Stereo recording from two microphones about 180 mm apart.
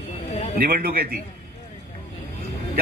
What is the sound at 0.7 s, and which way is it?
Speech, 60° right (ahead or behind).